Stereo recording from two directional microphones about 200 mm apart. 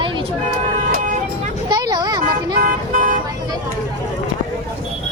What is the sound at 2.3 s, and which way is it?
Toot, 45° right (ahead or behind).